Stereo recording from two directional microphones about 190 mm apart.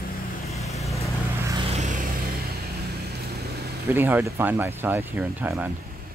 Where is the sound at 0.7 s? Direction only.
Centre (ahead or behind).